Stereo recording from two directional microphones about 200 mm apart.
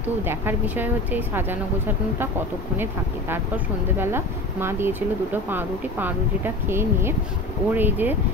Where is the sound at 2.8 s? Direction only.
10° right (ahead or behind).